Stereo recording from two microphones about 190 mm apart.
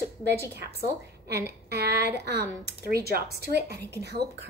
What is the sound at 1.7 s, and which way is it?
A woman's voice, 55° right (ahead or behind).